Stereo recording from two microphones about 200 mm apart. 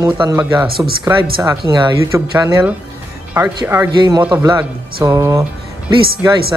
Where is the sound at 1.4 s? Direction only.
20° right (ahead or behind).